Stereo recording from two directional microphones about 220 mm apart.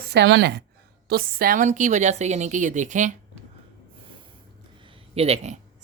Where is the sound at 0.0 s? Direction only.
50° right (ahead or behind); by 3.2 s 35° right (ahead or behind).